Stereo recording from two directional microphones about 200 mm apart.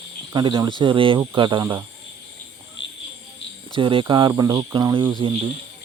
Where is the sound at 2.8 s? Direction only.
65° left (ahead or behind).